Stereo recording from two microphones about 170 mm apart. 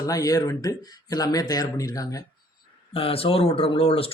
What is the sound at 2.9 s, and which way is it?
Speech, 35° left (ahead or behind).